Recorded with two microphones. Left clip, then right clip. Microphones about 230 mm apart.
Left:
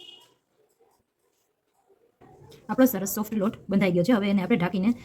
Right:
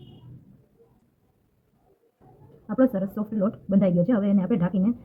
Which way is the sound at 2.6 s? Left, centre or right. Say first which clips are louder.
Even; left.